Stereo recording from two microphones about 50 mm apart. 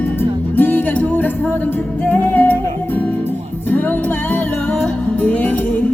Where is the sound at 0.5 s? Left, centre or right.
Left.